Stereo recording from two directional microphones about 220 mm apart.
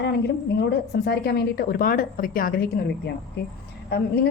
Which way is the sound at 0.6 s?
50° left (ahead or behind).